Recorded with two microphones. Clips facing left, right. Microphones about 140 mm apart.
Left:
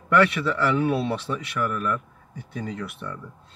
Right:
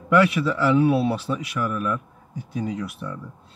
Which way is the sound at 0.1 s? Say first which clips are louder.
Right 2 dB; 5° right (ahead or behind).